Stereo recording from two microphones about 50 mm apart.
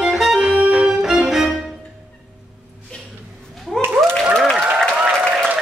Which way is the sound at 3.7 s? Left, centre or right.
Centre.